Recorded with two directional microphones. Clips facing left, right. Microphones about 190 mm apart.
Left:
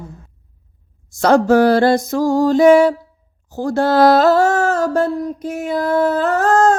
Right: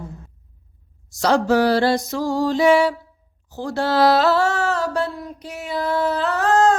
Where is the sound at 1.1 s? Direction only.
55° left (ahead or behind).